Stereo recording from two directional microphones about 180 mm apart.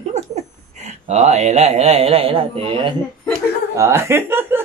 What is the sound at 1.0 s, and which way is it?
Speech, 40° right (ahead or behind).